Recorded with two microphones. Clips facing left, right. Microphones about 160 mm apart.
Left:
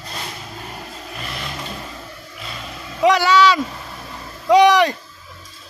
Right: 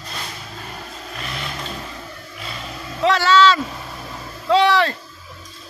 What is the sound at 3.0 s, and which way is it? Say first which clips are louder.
Vehicle: left 1 dB; 15° left (ahead or behind).